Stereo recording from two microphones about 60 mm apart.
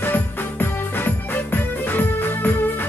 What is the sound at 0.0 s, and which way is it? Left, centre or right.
Music, left.